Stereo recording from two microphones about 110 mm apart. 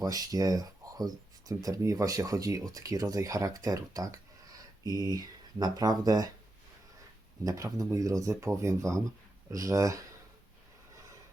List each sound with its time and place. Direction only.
0.0 s speech: 35° right (ahead or behind)
7.4 s speech: 30° right (ahead or behind)